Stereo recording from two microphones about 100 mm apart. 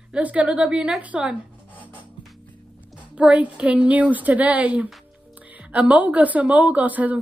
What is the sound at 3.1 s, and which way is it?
A woman's voice, 15° right (ahead or behind).